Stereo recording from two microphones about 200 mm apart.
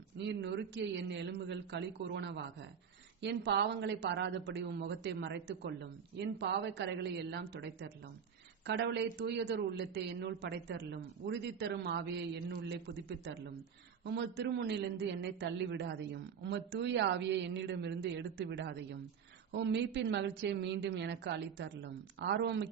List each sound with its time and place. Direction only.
0.3 s a man's voice: 60° right (ahead or behind)